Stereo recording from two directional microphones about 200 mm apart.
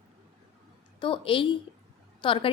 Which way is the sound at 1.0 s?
25° left (ahead or behind).